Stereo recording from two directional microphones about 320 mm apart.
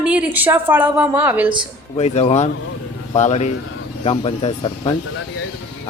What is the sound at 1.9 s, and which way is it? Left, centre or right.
Speech, centre.